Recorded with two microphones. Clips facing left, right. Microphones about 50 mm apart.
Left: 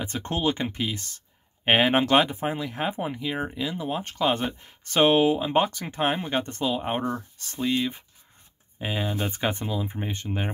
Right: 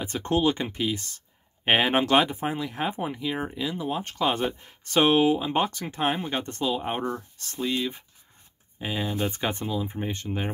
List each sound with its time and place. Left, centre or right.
0.0 s speech: centre